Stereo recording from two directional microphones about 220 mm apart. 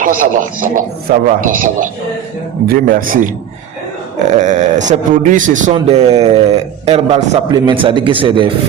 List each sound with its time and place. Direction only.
0.0 s a man's voice: 40° right (ahead or behind)